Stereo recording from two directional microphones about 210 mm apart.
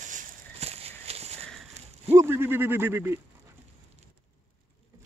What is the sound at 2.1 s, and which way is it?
Speech, 10° right (ahead or behind).